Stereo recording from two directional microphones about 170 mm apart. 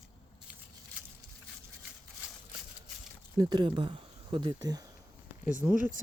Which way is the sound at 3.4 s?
25° right (ahead or behind).